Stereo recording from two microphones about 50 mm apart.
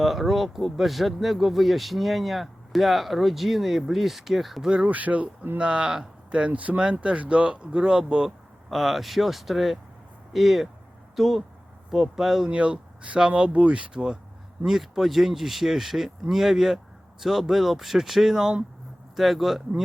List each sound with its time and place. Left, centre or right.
0.0 s speech: centre
4.6 s speech: centre
4.9 s speech: right
5.5 s speech: centre
6.3 s speech: right
8.7 s speech: centre
12.5 s speech: right
14.6 s speech: centre